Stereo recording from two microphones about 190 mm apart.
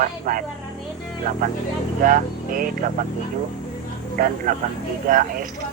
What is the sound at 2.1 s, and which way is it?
Speech, 45° right (ahead or behind).